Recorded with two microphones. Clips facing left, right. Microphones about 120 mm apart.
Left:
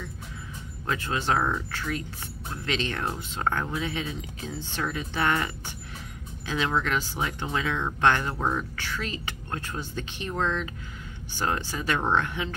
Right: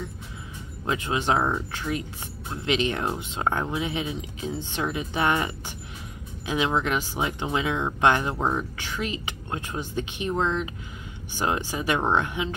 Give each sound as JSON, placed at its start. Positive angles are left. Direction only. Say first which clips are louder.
{"t": 0.8, "sound": "speech", "louder": "right 2 dB", "side_deg": -15}